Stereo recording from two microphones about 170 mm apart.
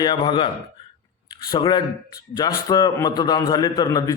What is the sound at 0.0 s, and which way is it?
A man's voice, 25° left (ahead or behind).